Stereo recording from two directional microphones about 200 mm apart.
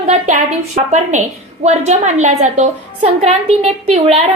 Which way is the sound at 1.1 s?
35° right (ahead or behind).